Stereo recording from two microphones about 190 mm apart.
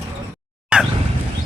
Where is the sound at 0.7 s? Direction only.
5° right (ahead or behind).